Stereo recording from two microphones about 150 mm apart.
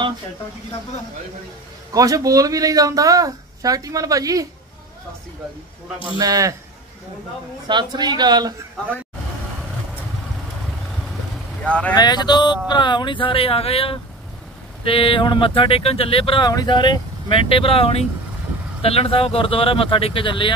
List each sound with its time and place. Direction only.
2.0 s speech: 25° right (ahead or behind)
6.1 s speech: 25° right (ahead or behind)
7.6 s speech: 30° right (ahead or behind)
11.6 s speech: 10° left (ahead or behind)
11.9 s speech: 30° left (ahead or behind)